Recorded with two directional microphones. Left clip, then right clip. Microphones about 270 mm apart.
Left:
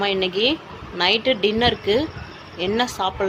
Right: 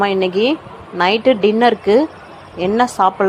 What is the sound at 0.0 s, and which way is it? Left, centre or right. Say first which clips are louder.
A woman's voice: right 5 dB; centre.